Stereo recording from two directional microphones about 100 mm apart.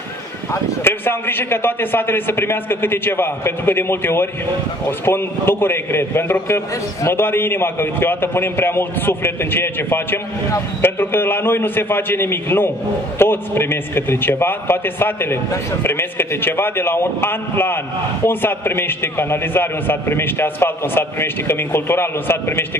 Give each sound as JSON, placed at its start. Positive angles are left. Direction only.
{"t": 0.5, "sound": "a man's voice", "side_deg": 25}